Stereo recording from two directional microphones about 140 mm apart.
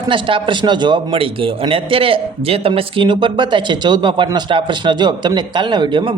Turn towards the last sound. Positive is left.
turn(degrees=-35)  # may be behind; listen again after turning